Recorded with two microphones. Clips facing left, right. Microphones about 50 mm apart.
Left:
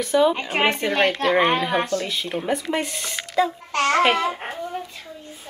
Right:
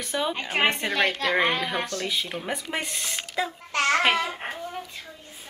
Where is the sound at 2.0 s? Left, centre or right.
Centre.